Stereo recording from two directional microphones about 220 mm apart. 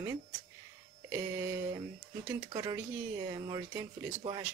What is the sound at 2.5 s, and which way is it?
Speech, 20° right (ahead or behind).